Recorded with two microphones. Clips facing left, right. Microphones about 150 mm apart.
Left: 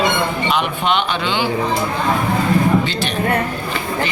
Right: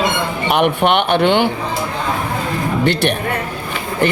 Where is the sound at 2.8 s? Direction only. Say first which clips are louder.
Right 6 dB; 65° right (ahead or behind).